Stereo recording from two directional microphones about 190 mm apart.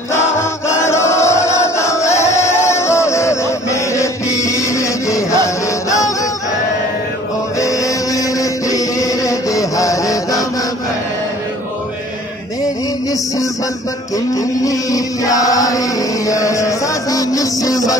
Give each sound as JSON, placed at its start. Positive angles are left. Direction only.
{"t": 0.7, "sound": "chant", "side_deg": 15}
{"t": 7.5, "sound": "chant", "side_deg": 15}
{"t": 14.1, "sound": "chant", "side_deg": 15}